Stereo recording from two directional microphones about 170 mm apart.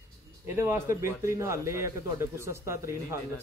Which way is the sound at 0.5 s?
15° right (ahead or behind).